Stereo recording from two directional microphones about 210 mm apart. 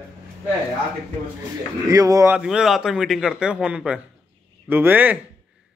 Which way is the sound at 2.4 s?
Centre (ahead or behind).